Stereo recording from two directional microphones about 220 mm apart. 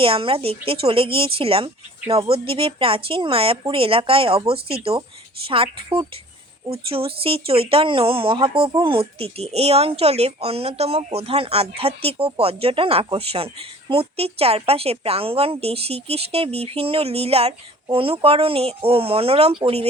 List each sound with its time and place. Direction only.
0.0 s speech: 25° right (ahead or behind)